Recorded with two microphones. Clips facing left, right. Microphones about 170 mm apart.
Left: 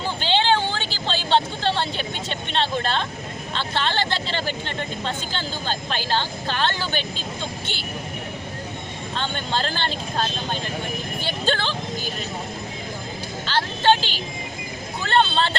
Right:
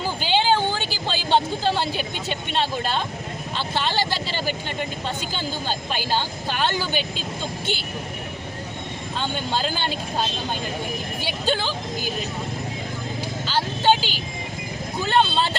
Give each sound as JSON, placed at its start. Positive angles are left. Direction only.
{"t": 0.2, "sound": "a sound", "side_deg": -10}
{"t": 3.5, "sound": "speech", "side_deg": -10}
{"t": 9.1, "sound": "speech", "side_deg": -5}
{"t": 11.3, "sound": "speech", "side_deg": -10}
{"t": 13.5, "sound": "music", "side_deg": -5}
{"t": 15.0, "sound": "speech", "side_deg": -5}